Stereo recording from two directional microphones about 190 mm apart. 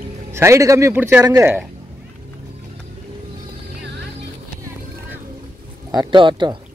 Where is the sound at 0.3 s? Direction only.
15° right (ahead or behind).